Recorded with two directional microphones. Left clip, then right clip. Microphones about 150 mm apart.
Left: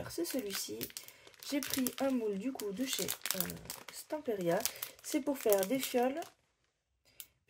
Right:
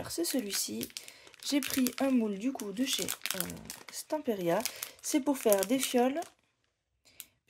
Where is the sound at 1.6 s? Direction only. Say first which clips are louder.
Right 4 dB; 25° right (ahead or behind).